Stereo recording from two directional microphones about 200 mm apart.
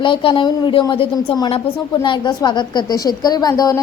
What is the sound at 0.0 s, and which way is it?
A woman's voice, 25° left (ahead or behind).